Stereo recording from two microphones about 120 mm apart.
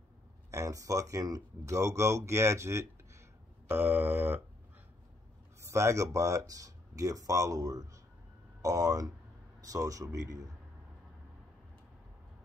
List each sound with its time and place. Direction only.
0.5 s speech: 30° right (ahead or behind)
3.6 s mantra: 20° right (ahead or behind)
5.6 s speech: 25° right (ahead or behind)